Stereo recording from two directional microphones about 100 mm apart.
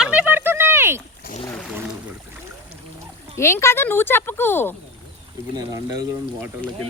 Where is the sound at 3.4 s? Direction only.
25° left (ahead or behind).